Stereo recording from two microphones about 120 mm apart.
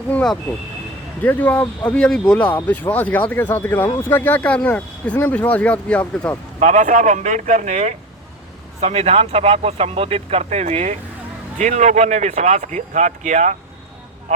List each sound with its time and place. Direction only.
0.1 s speech: 10° left (ahead or behind)
6.6 s speech: 90° right; by 7.9 s 70° right (ahead or behind)
8.8 s speech: 60° right (ahead or behind)
11.5 s speech: 85° right
14.3 s a sound: 80° right